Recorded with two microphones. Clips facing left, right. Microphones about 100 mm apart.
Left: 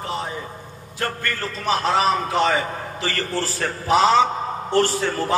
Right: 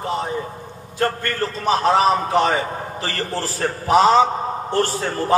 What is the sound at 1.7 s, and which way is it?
A man's voice, 35° right (ahead or behind).